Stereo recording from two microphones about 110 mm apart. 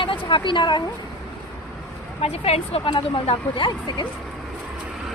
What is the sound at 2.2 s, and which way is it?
Speech, 65° left (ahead or behind).